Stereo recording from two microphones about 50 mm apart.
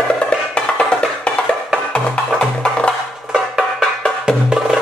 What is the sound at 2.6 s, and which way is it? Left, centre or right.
Music, left.